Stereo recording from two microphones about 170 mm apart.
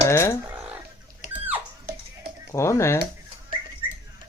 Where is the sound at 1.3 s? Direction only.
10° right (ahead or behind).